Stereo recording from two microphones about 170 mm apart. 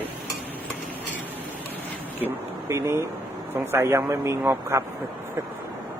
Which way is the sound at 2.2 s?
15° right (ahead or behind).